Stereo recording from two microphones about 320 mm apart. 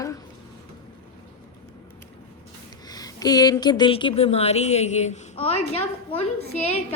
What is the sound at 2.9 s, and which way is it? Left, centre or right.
A woman's voice, centre.